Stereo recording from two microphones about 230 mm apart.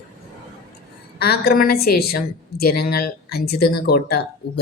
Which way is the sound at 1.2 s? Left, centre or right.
Left.